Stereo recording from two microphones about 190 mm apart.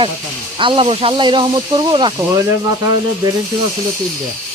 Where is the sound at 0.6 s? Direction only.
25° right (ahead or behind).